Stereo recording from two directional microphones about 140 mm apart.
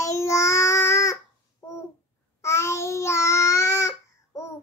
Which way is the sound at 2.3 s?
20° left (ahead or behind).